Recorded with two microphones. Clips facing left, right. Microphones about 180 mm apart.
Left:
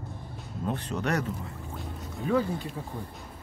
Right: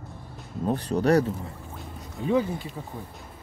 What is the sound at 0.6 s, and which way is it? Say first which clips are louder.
Speech: right 7 dB; 35° right (ahead or behind).